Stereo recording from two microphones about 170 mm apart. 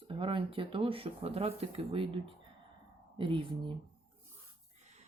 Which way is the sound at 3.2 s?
30° right (ahead or behind).